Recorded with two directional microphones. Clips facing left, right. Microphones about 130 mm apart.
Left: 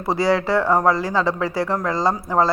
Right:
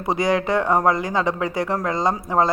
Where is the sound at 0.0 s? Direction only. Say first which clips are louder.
Left 1 dB; 20° right (ahead or behind).